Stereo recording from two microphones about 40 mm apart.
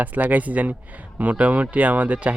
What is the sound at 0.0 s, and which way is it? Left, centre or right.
Speech, right.